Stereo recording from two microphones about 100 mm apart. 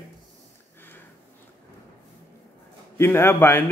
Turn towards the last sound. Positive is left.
turn(degrees=25)  # may be behind; listen again after turning